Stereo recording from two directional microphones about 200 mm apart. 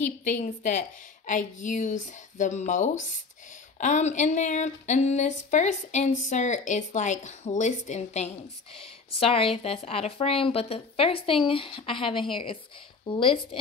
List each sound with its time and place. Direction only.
0.0 s a woman's voice: 40° left (ahead or behind)